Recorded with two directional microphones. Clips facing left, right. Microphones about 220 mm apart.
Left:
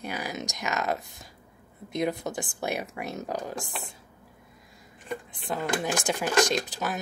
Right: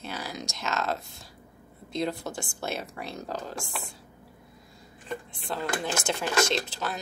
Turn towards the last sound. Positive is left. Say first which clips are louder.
# left 1 dB
turn(degrees=15)  # may be behind; listen again after turning